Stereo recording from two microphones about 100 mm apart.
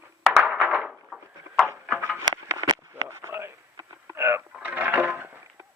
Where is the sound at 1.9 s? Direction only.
20° right (ahead or behind).